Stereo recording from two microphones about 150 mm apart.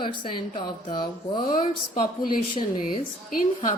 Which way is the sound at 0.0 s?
35° left (ahead or behind).